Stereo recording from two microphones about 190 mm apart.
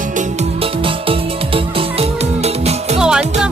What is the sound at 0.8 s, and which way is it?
Music, 30° right (ahead or behind).